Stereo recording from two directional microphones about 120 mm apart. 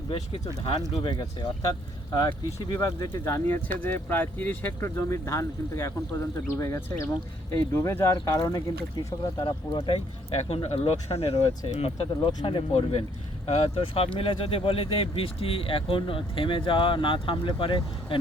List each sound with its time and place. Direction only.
1.0 s speech: 40° left (ahead or behind)